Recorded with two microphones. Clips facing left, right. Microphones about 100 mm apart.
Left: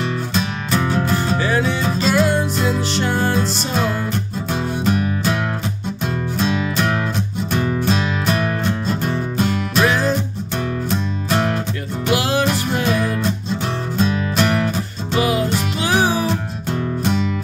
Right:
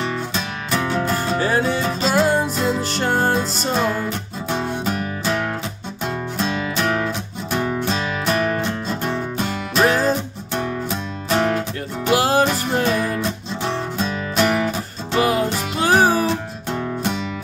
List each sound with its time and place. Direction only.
0.0 s music: centre (ahead or behind)
1.4 s music: 40° right (ahead or behind)
2.5 s music: centre (ahead or behind)
2.9 s music: 45° right (ahead or behind)
4.5 s music: centre (ahead or behind)
9.8 s music: 40° right (ahead or behind)
10.5 s music: centre (ahead or behind)
12.1 s music: 40° right (ahead or behind)
12.8 s music: 5° left (ahead or behind)
15.8 s music: 45° right (ahead or behind)
16.3 s music: centre (ahead or behind)